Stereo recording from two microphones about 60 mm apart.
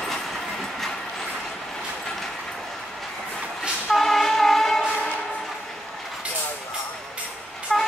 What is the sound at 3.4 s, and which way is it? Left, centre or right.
Vehicle, centre.